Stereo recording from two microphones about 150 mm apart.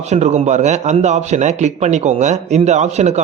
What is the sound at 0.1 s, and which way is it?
Speech, 50° right (ahead or behind).